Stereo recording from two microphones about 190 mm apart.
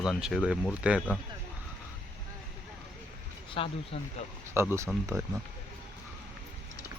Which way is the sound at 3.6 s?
30° left (ahead or behind).